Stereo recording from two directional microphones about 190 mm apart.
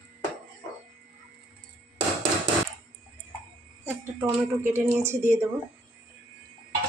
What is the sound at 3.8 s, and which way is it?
Speech, 10° right (ahead or behind).